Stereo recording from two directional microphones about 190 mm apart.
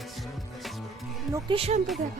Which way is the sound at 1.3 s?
25° right (ahead or behind).